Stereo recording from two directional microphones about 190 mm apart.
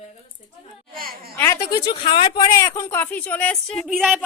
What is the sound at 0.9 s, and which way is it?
Speech, 50° right (ahead or behind).